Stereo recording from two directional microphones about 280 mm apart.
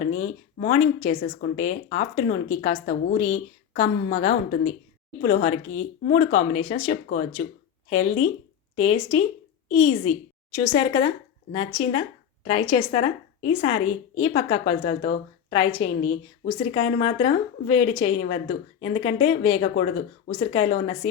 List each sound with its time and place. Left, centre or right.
0.1 s a woman's voice: left